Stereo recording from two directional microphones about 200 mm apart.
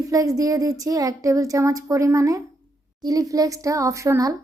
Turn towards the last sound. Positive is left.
turn(degrees=-15)  # may be behind; listen again after turning